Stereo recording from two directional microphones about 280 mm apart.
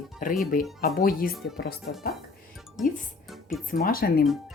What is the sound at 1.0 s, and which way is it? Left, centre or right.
Speech, left.